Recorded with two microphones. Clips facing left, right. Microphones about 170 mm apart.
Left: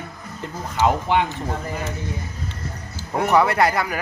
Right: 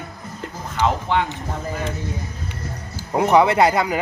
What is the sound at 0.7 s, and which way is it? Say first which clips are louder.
Speech: left 1 dB; 15° left (ahead or behind).